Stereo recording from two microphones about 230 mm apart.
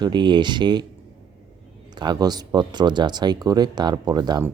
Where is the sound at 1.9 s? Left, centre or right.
Centre.